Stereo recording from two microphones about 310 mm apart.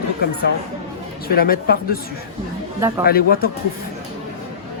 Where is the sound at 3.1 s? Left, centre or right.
Left.